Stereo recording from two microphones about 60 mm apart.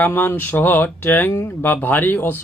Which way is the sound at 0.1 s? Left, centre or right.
Left.